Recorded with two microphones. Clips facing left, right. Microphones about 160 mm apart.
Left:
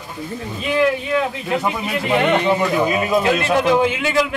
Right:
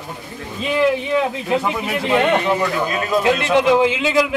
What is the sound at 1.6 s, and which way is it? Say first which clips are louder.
Speech: even; 15° left (ahead or behind).